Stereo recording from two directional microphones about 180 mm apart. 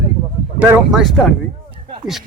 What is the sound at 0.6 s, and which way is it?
Speech, 5° right (ahead or behind).